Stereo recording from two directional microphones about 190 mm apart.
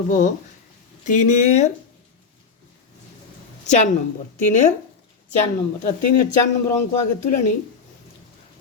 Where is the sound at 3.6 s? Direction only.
40° left (ahead or behind).